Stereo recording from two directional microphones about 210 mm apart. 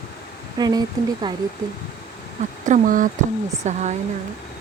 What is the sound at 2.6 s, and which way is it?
Speech, 40° right (ahead or behind).